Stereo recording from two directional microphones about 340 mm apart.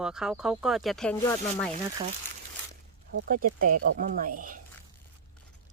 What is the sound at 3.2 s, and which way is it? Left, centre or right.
Speech, right.